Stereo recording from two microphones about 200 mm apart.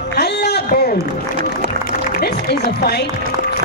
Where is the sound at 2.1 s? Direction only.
50° left (ahead or behind).